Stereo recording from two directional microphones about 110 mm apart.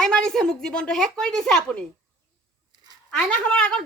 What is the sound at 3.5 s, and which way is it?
Speech, 10° left (ahead or behind).